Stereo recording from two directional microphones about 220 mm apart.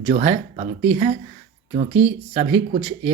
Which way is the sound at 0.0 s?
30° right (ahead or behind).